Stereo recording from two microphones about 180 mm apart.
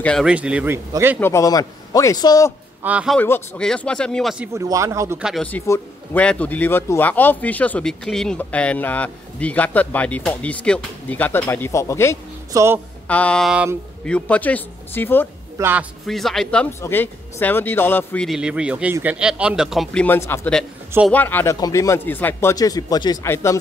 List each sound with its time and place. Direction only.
0.0 s speech: 5° left (ahead or behind)
0.3 s speech: 5° right (ahead or behind)
1.2 s speech: 15° left (ahead or behind)
2.8 s speech: 5° right (ahead or behind)
3.2 s speech: 10° left (ahead or behind)
4.6 s speech: 15° right (ahead or behind)
5.2 s speech: 5° left (ahead or behind)
12.5 s speech: 15° right (ahead or behind)
13.1 s speech: 5° left (ahead or behind)
15.5 s speech: 10° right (ahead or behind)
16.1 s speech: centre (ahead or behind)